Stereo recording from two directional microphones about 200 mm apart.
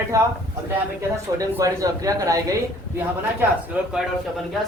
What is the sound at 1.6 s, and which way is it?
Speech, 15° right (ahead or behind).